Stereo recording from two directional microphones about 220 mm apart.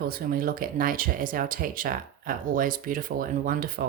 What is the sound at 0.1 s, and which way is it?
Speech, 40° right (ahead or behind).